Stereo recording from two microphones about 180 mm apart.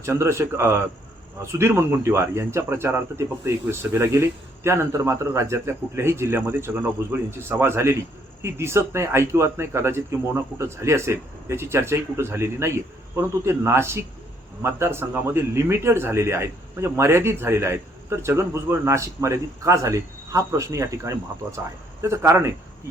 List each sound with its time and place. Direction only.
0.0 s a man's voice: 15° right (ahead or behind)